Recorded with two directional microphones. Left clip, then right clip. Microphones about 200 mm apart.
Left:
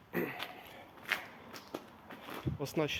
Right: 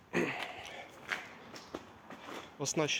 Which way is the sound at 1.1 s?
5° left (ahead or behind).